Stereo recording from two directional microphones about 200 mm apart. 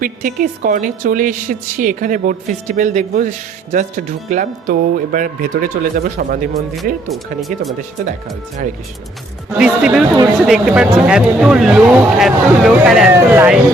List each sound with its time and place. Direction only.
0.0 s a woman's voice: 45° right (ahead or behind)
7.1 s speech: centre (ahead or behind)
9.6 s speech: 5° right (ahead or behind)